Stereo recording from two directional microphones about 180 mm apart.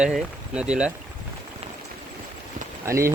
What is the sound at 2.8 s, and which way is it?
Speech, 15° right (ahead or behind).